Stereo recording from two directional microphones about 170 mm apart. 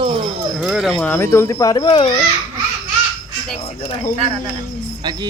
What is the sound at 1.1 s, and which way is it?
Speech, 15° left (ahead or behind).